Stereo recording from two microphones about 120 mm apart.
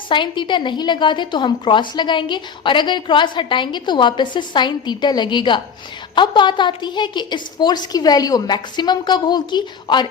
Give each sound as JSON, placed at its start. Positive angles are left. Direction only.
{"t": 0.1, "sound": "a woman's voice", "side_deg": 40}